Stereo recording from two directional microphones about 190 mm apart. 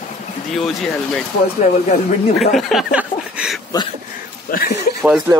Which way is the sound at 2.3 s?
Centre (ahead or behind).